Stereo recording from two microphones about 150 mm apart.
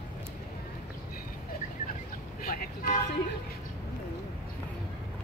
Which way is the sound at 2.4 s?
80° left.